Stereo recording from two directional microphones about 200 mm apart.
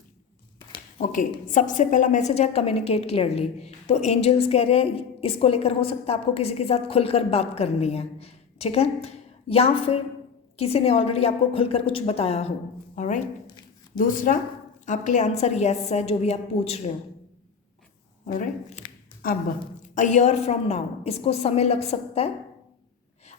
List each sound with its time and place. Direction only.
1.0 s a woman's voice: 40° left (ahead or behind)
18.3 s a woman's voice: 40° left (ahead or behind)
20.0 s a woman's voice: 35° left (ahead or behind)